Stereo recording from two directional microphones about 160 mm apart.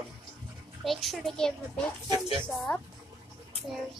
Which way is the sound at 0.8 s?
Centre (ahead or behind).